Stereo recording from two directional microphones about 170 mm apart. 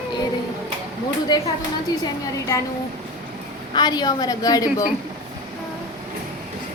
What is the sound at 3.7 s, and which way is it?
A woman's voice, 25° left (ahead or behind).